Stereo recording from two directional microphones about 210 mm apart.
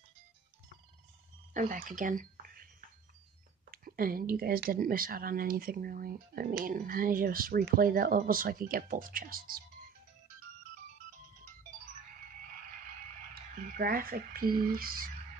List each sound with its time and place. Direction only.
1.5 s speech: 40° right (ahead or behind)
3.7 s speech: 45° right (ahead or behind)
13.3 s speech: 45° right (ahead or behind)